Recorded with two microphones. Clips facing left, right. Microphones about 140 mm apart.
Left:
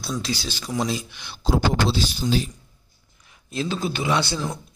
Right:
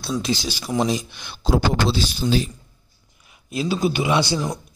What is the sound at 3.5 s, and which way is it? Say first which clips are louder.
Speech: right 4 dB; 10° right (ahead or behind).